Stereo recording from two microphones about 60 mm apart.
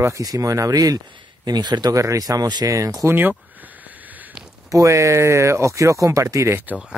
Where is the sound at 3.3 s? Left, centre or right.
Right.